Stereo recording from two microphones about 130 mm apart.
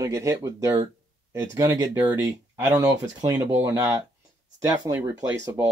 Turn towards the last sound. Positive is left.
turn(degrees=-15)  # may be behind; listen again after turning